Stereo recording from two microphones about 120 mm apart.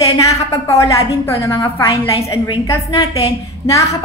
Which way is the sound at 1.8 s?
45° left (ahead or behind).